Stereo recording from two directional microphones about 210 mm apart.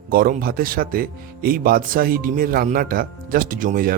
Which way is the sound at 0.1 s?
45° right (ahead or behind).